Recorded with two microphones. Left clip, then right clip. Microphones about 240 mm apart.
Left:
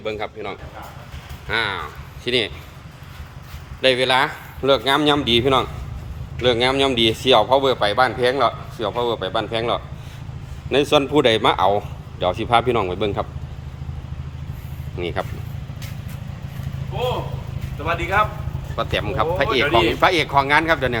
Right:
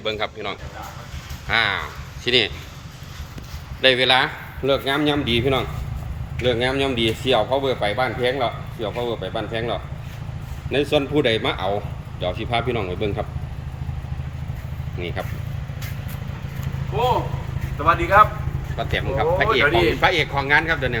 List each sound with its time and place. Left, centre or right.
0.0 s speech: centre
3.8 s speech: centre
14.9 s speech: centre
17.8 s a man's voice: centre